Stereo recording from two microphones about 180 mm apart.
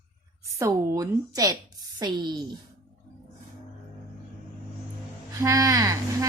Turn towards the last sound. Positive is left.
turn(degrees=-20)  # may be behind; listen again after turning